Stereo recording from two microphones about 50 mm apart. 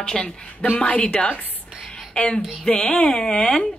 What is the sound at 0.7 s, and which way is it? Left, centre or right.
A woman's voice, left.